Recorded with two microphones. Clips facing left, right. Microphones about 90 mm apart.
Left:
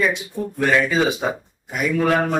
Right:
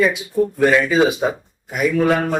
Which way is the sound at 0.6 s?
5° right (ahead or behind).